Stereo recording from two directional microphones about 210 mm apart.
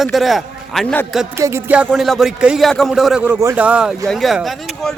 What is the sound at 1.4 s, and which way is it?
Speech, 10° right (ahead or behind).